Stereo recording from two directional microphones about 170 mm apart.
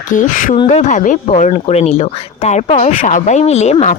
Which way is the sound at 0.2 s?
50° left (ahead or behind).